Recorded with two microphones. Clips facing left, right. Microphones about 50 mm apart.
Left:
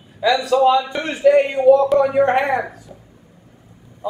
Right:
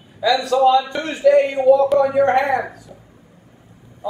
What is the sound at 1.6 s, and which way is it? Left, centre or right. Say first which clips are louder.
Speech: left 1 dB; centre.